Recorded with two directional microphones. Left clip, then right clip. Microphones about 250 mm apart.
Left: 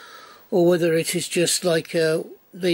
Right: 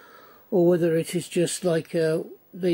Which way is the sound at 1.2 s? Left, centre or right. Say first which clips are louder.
Left 4 dB; centre.